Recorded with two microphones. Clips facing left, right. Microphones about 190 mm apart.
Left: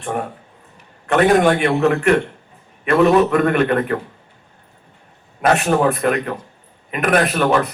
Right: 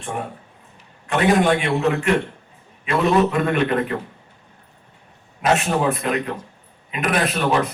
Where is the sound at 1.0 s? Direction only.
60° left (ahead or behind).